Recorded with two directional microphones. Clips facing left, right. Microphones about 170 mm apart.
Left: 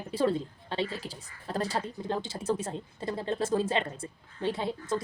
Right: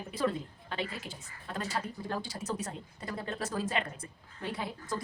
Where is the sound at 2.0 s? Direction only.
20° left (ahead or behind).